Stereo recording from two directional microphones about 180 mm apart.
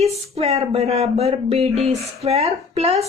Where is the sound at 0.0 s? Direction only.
35° right (ahead or behind).